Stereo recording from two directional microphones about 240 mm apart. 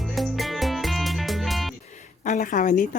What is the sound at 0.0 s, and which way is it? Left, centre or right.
Music, centre.